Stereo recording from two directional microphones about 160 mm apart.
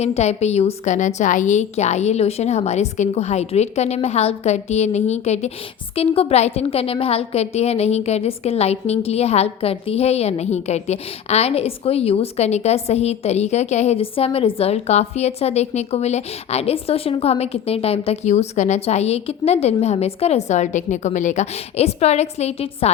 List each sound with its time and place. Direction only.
0.0 s a woman's voice: 45° left (ahead or behind)